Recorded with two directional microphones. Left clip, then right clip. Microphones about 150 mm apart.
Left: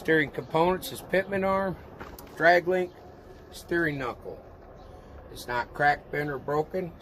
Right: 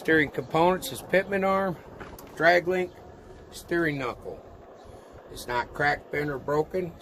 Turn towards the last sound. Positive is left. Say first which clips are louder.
# right 2 dB
turn(degrees=15)  # may be behind; listen again after turning